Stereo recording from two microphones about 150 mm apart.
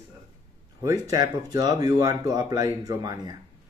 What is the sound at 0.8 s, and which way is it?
Speech, 25° right (ahead or behind).